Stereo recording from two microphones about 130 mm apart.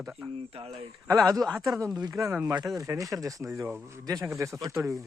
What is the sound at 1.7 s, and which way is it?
A man's voice, 20° right (ahead or behind).